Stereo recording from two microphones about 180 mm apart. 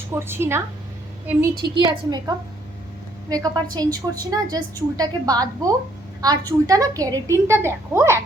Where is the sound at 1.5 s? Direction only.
25° right (ahead or behind).